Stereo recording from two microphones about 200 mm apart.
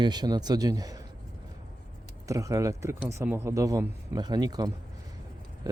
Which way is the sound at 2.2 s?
15° right (ahead or behind).